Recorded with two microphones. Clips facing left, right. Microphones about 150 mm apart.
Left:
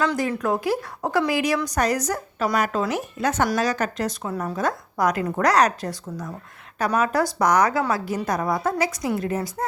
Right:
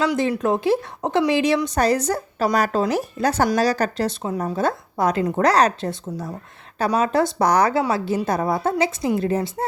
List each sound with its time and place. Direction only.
0.2 s a woman's voice: 25° right (ahead or behind)